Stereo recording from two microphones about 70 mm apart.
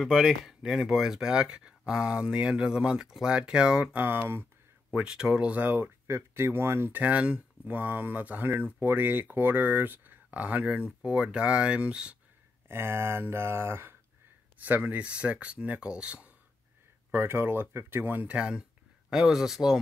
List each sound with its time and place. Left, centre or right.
0.2 s speech: centre
3.9 s speech: right
4.9 s speech: centre
5.7 s speech: right; by 12.2 s centre
12.6 s speech: right
14.6 s speech: right
17.1 s speech: right
18.2 s speech: centre